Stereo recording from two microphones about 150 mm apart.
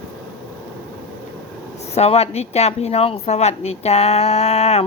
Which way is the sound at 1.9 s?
45° left (ahead or behind).